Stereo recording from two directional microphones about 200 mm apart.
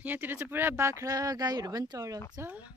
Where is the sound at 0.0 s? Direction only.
10° right (ahead or behind).